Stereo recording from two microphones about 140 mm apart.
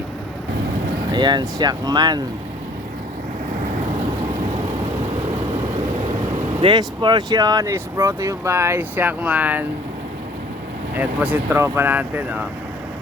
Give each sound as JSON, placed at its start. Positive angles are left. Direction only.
{"t": 1.1, "sound": "speech", "side_deg": -30}
{"t": 6.6, "sound": "speech", "side_deg": -35}
{"t": 10.9, "sound": "speech", "side_deg": -10}